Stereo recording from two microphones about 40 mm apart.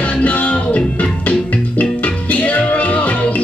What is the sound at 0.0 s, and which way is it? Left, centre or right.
Music, left.